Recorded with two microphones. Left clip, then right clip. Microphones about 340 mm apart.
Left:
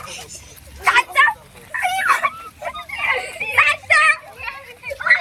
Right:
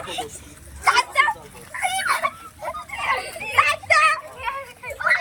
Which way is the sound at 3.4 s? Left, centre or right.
Centre.